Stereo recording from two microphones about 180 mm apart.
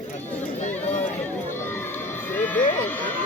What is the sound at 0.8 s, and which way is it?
Speech, 40° left (ahead or behind).